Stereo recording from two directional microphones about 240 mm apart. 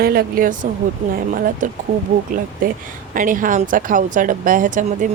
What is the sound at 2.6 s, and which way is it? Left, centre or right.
Speech, right.